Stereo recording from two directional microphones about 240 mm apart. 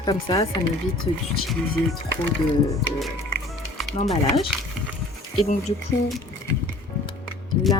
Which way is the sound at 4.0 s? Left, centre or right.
Left.